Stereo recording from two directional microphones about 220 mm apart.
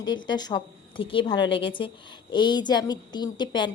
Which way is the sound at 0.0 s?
20° left (ahead or behind).